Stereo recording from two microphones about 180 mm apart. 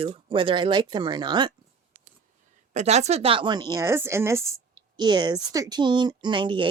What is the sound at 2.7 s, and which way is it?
A woman's voice, 40° right (ahead or behind).